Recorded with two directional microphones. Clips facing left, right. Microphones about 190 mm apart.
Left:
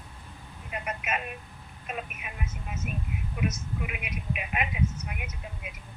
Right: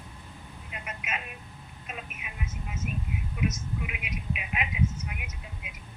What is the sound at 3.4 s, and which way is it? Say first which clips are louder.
Speech: even; 50° left (ahead or behind).